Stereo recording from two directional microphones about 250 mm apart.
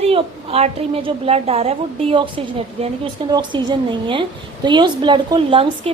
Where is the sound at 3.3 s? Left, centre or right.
Centre.